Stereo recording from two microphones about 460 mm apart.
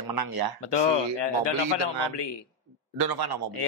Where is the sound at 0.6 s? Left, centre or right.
Left.